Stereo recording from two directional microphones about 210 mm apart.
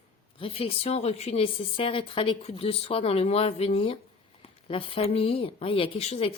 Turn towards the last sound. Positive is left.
turn(degrees=30)  # may be behind; listen again after turning